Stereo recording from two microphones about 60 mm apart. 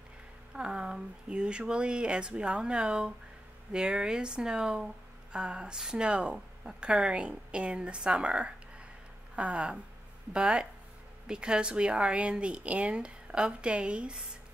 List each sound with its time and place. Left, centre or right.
0.6 s speech: centre